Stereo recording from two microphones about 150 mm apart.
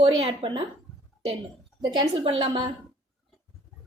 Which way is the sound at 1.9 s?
35° right (ahead or behind).